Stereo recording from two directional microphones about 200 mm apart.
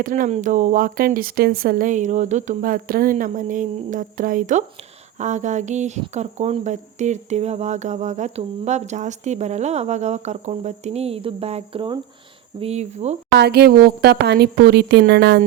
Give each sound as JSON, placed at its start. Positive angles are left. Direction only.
{"t": 0.0, "sound": "speech", "side_deg": -40}
{"t": 13.3, "sound": "a woman's voice", "side_deg": -55}